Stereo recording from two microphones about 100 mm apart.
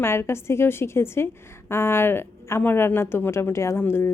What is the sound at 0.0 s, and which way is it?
A woman's voice, 25° left (ahead or behind).